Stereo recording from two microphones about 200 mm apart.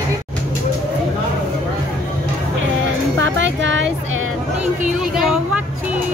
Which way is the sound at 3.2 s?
65° right (ahead or behind).